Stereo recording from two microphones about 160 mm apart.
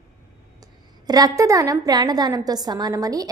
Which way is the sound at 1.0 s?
25° right (ahead or behind).